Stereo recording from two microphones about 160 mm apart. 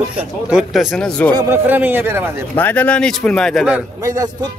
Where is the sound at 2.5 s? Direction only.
10° left (ahead or behind).